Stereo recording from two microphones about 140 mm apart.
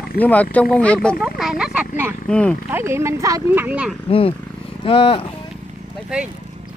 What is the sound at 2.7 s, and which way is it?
Speech, 20° right (ahead or behind).